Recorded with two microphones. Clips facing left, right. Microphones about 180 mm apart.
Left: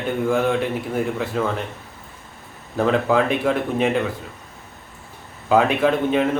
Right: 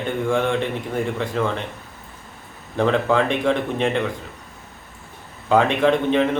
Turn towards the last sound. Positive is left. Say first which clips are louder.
# right 1 dB
turn(degrees=5)  # may be behind; listen again after turning